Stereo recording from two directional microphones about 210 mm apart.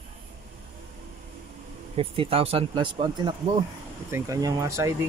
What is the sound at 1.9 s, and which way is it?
Speech, 25° right (ahead or behind).